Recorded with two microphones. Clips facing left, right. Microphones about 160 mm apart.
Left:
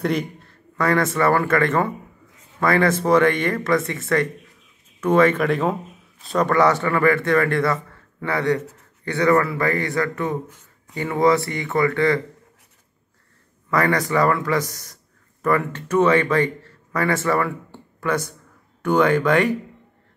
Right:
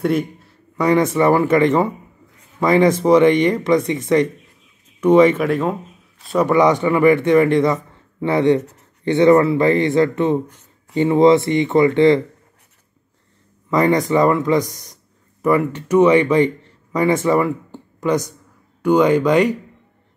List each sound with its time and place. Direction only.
0.0 s a man's voice: 5° right (ahead or behind)
0.7 s a man's voice: 15° right (ahead or behind)
5.4 s a man's voice: centre (ahead or behind); by 12.2 s 20° right (ahead or behind)
13.7 s a man's voice: 20° right (ahead or behind)